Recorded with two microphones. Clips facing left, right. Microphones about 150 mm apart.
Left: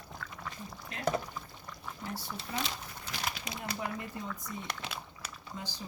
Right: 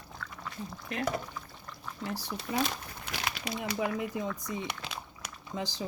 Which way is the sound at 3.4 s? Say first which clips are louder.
Right 6 dB; 90° right.